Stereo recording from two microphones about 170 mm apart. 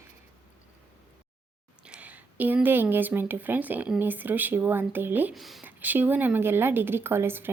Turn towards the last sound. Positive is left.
turn(degrees=-15)  # may be behind; listen again after turning